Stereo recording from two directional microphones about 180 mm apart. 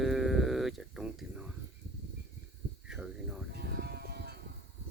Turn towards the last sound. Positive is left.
turn(degrees=-60)  # may be behind; listen again after turning